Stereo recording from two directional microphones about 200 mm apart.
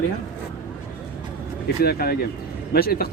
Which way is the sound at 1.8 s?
50° left (ahead or behind).